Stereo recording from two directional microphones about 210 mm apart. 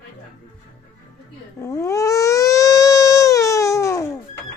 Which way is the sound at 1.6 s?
15° left (ahead or behind).